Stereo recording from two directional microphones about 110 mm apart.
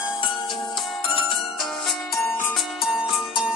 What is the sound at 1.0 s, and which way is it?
Ringtone, 55° left (ahead or behind).